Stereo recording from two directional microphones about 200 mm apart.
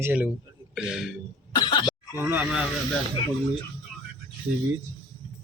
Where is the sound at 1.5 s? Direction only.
20° left (ahead or behind).